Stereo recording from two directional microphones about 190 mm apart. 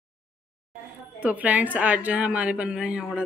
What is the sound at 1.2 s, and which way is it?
A woman's voice, 10° right (ahead or behind).